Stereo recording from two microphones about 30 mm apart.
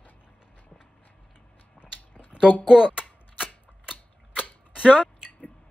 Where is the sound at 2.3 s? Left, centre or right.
Right.